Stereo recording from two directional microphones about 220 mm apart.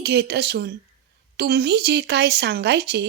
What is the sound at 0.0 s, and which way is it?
A woman's voice, 50° right (ahead or behind).